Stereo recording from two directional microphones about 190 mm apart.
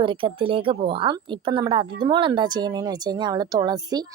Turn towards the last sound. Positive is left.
turn(degrees=-20)  # may be behind; listen again after turning